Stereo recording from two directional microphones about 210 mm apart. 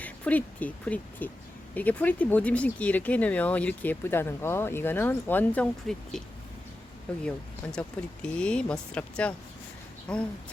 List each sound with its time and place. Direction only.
0.0 s speech: 5° left (ahead or behind)
7.3 s speech: 5° left (ahead or behind)